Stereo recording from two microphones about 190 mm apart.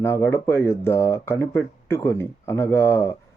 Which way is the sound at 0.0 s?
15° left (ahead or behind).